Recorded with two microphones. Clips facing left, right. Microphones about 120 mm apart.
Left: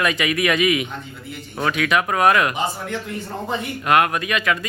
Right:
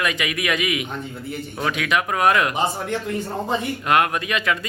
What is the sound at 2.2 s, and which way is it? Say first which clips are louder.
Speech: left 2 dB; 20° left (ahead or behind).